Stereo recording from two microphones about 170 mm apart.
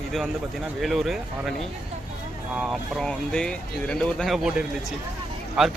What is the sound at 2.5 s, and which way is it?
Speech, centre (ahead or behind).